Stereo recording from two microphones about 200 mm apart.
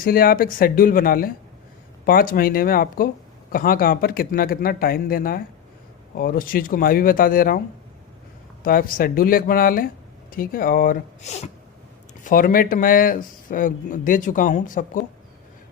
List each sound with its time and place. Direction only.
0.0 s speech: 45° left (ahead or behind)
8.6 s speech: 45° left (ahead or behind)
12.2 s speech: 45° left (ahead or behind)